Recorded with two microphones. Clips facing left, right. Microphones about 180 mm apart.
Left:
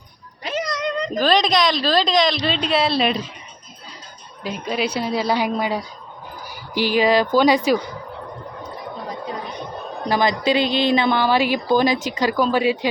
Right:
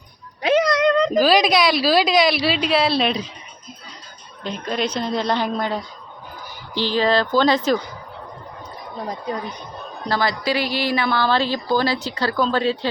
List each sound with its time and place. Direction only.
0.4 s cat: 65° right (ahead or behind)
1.1 s a woman's voice: 5° right (ahead or behind)
4.4 s speech: 5° left (ahead or behind)
10.1 s speech: 20° left (ahead or behind)